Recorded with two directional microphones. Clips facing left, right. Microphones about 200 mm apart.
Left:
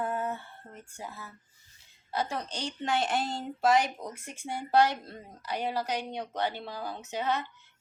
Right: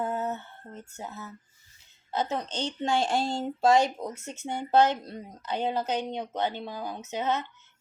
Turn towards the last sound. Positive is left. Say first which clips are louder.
# right 2 dB
turn(degrees=-20)  # may be behind; listen again after turning